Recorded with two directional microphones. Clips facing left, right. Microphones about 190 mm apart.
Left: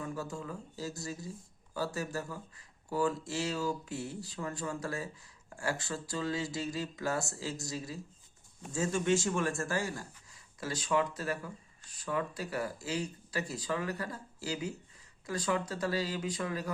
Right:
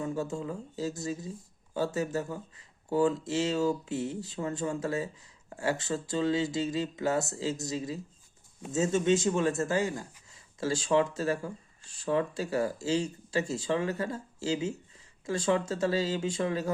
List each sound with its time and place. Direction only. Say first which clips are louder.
0.0 s speech: right 6 dB; 25° right (ahead or behind)